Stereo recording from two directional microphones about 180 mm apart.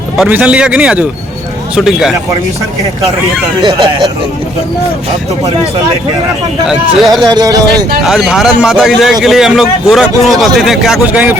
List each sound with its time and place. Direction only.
0.2 s speech: 5° right (ahead or behind)
6.7 s speech: centre (ahead or behind)
7.3 s speech: 20° right (ahead or behind)
8.0 s speech: centre (ahead or behind)